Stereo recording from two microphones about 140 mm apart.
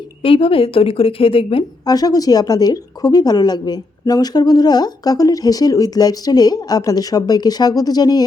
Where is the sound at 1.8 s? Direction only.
30° left (ahead or behind).